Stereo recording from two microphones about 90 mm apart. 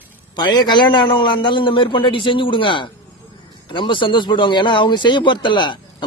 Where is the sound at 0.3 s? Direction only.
50° left (ahead or behind).